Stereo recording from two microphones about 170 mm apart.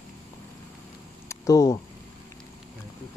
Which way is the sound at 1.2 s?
20° left (ahead or behind).